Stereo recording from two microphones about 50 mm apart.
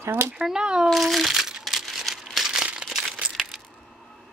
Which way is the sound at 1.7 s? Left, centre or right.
Centre.